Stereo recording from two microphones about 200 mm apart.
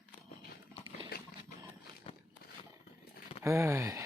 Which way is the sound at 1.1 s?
50° left (ahead or behind).